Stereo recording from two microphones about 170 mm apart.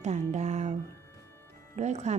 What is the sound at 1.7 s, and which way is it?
Speech, 40° right (ahead or behind).